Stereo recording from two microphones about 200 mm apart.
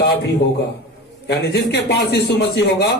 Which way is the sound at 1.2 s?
55° left (ahead or behind).